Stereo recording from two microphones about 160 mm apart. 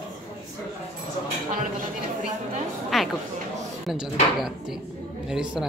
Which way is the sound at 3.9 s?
5° right (ahead or behind).